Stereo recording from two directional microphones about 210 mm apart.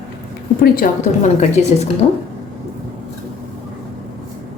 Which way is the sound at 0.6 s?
40° left (ahead or behind).